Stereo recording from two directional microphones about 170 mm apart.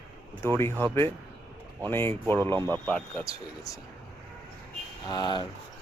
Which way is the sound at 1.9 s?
15° left (ahead or behind).